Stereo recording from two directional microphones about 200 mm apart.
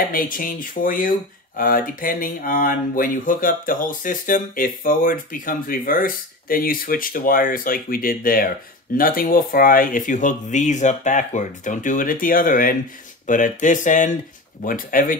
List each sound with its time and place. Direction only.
0.1 s speech: 45° left (ahead or behind)